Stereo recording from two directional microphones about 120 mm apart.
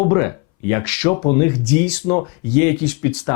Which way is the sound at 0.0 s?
25° left (ahead or behind).